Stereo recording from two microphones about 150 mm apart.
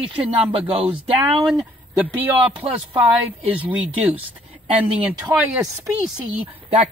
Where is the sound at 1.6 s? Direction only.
10° right (ahead or behind).